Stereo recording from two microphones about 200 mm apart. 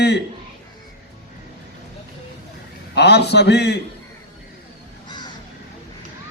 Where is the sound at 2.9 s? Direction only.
55° left (ahead or behind).